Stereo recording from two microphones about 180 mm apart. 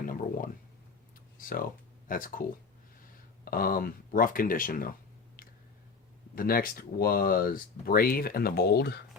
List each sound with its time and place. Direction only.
0.0 s a sound: 50° left (ahead or behind)
1.4 s speech: 50° left (ahead or behind)
6.3 s speech: 55° left (ahead or behind)